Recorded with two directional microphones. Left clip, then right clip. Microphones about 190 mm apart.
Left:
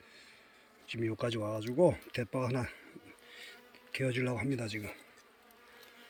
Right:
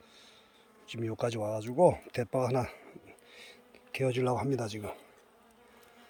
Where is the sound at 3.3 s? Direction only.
15° right (ahead or behind).